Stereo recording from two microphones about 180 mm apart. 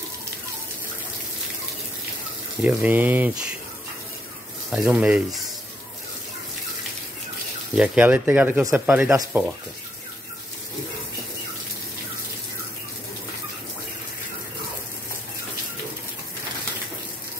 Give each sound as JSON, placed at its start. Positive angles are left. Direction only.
{"t": 2.6, "sound": "speech", "side_deg": -10}
{"t": 4.6, "sound": "speech", "side_deg": -5}
{"t": 7.7, "sound": "speech", "side_deg": -5}